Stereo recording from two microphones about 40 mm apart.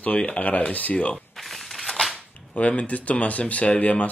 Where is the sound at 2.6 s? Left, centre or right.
Left.